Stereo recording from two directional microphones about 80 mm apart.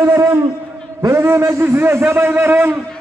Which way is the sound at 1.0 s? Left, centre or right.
Right.